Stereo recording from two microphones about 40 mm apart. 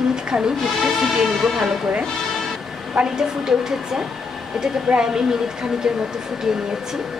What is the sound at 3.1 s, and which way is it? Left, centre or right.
Speech, centre.